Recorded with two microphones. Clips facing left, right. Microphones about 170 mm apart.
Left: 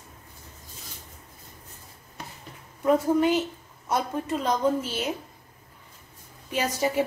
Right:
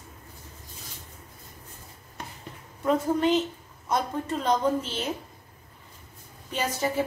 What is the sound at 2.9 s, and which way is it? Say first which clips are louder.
A woman's voice: left 2 dB; 10° left (ahead or behind).